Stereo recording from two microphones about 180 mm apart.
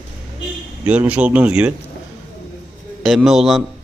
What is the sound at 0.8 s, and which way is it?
Speech, 10° right (ahead or behind).